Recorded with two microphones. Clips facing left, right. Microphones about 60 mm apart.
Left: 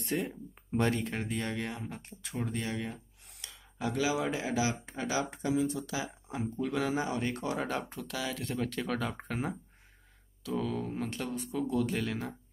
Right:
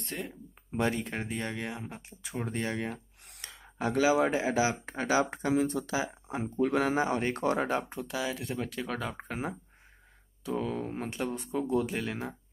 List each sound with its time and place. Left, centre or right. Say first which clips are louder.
0.0 s a sound: left 5 dB; centre
1.2 s speech: even; right
1.5 s speech: even; centre
2.3 s speech: right 2 dB; right
2.9 s a sound: right 4 dB; right
4.0 s speech: right 6 dB; right
5.9 s speech: right 4 dB; right
7.5 s speech: right 4 dB; right
10.4 s speech: right 1 dB; right
11.8 s speech: left 1 dB; centre